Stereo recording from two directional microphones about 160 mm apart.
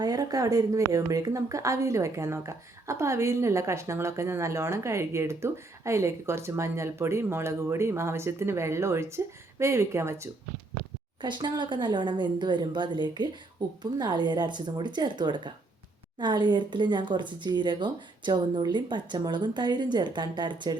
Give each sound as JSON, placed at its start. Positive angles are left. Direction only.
{"t": 0.0, "sound": "a woman's voice", "side_deg": -25}
{"t": 11.2, "sound": "speech", "side_deg": -30}